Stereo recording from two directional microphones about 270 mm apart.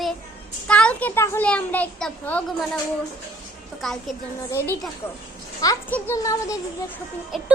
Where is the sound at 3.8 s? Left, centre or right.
Centre.